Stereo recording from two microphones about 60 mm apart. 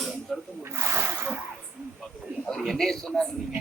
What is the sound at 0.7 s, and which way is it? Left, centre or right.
Speech, right.